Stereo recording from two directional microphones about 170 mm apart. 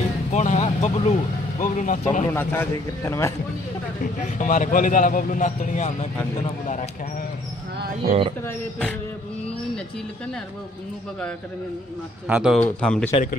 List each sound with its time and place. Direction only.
0.3 s vehicle: 45° left (ahead or behind)
1.6 s a man's voice: 50° left (ahead or behind)
2.3 s a man's voice: 15° left (ahead or behind)
4.0 s a man's voice: 50° left (ahead or behind)
12.3 s speech: 5° right (ahead or behind)
12.5 s a man's voice: 5° left (ahead or behind)
13.1 s a man's voice: 50° left (ahead or behind)